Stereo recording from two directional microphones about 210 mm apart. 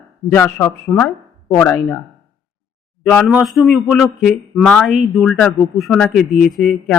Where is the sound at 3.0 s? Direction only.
Centre (ahead or behind).